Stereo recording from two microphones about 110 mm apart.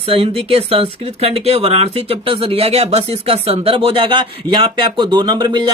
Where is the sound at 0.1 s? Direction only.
60° right (ahead or behind).